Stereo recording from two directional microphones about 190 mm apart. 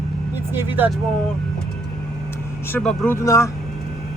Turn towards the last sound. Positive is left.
turn(degrees=15)  # may be behind; listen again after turning